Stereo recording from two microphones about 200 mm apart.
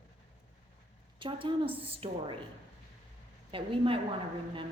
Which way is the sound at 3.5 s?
25° right (ahead or behind).